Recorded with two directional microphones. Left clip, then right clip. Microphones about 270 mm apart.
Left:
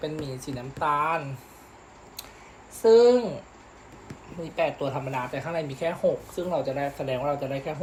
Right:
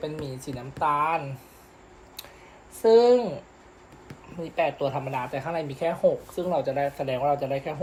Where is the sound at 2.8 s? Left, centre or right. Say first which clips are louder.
Even; centre.